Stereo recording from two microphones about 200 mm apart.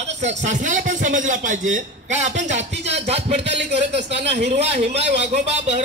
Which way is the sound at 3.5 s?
60° right (ahead or behind).